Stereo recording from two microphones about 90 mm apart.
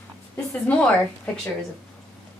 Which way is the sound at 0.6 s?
15° left (ahead or behind).